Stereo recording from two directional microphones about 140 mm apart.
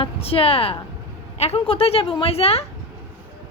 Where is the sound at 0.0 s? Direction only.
40° left (ahead or behind).